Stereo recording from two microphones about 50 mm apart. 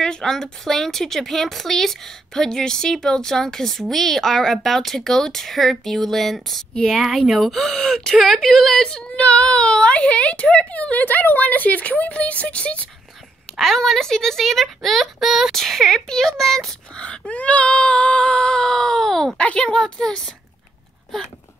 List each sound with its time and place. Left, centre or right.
0.0 s a woman's voice: centre
8.8 s speech: centre
13.6 s a woman's voice: centre
16.9 s speech: left
19.3 s speech: left